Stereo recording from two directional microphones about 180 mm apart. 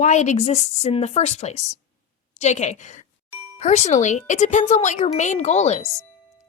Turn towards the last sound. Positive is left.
turn(degrees=35)  # may be behind; listen again after turning